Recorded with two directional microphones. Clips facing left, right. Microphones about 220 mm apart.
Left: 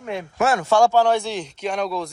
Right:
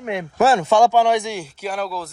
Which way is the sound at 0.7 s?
15° right (ahead or behind).